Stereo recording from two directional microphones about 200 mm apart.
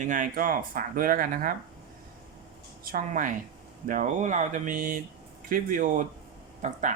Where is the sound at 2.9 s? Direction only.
45° right (ahead or behind).